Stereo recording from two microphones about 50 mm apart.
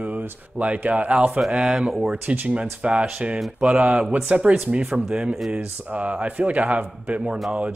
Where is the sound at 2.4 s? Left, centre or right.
Right.